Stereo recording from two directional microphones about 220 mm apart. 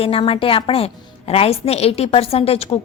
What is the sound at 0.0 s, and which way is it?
A woman's voice, 25° left (ahead or behind).